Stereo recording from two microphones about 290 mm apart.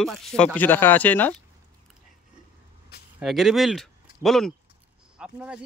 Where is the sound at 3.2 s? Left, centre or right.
Centre.